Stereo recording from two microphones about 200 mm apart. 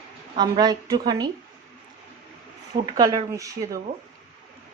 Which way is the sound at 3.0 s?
20° right (ahead or behind).